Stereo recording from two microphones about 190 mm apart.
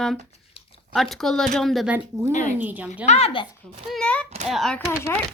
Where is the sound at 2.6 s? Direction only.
10° right (ahead or behind).